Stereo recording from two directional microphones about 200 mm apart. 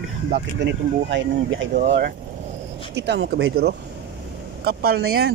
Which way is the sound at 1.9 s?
50° right (ahead or behind).